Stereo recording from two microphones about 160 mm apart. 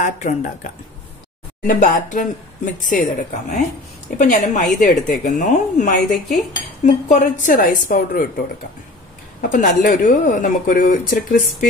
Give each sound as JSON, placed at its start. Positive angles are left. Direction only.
{"t": 0.0, "sound": "a woman's voice", "side_deg": 50}
{"t": 1.7, "sound": "a woman's voice", "side_deg": 55}